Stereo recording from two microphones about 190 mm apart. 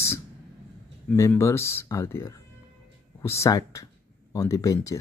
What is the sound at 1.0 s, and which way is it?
Speech, 15° left (ahead or behind).